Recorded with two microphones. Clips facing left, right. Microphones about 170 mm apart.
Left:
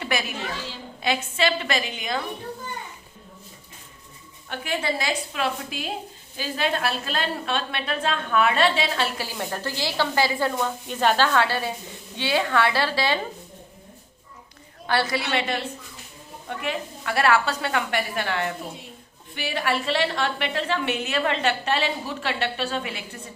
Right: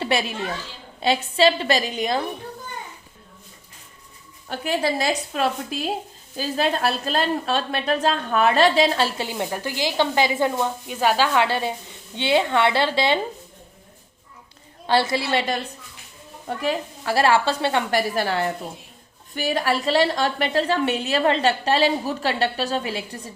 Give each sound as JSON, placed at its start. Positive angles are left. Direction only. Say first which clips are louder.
{"t": 0.0, "sound": "a woman's voice", "louder": "right 4 dB", "side_deg": -30}
{"t": 4.4, "sound": "a woman's voice", "louder": "right 4 dB", "side_deg": -35}
{"t": 9.1, "sound": "speech", "louder": "right 4 dB", "side_deg": -20}
{"t": 10.8, "sound": "speech", "louder": "even", "side_deg": -5}
{"t": 14.8, "sound": "speech", "louder": "right 4 dB", "side_deg": -25}
{"t": 16.6, "sound": "a woman's voice", "louder": "right 5 dB", "side_deg": -35}